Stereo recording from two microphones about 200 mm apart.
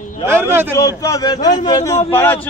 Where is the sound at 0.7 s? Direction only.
15° left (ahead or behind).